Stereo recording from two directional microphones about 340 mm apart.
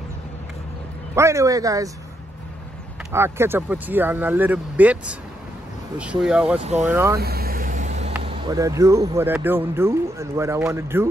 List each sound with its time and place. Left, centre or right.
1.1 s speech: centre
3.1 s speech: centre
7.2 s vehicle: right
8.3 s speech: centre